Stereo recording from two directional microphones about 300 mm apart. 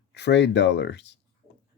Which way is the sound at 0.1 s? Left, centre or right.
Left.